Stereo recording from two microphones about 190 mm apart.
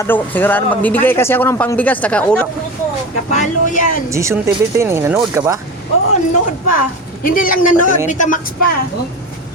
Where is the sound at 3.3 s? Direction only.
40° left (ahead or behind).